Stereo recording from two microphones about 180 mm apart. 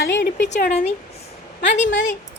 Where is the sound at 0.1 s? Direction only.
80° left.